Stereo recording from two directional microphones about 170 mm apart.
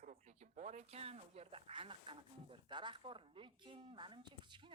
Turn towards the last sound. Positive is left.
turn(degrees=-30)  # may be behind; listen again after turning